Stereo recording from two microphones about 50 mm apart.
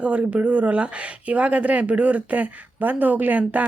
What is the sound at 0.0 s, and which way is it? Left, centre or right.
Speech, right.